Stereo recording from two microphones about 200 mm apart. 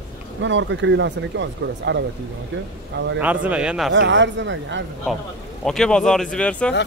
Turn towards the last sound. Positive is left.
turn(degrees=5)  # may be behind; listen again after turning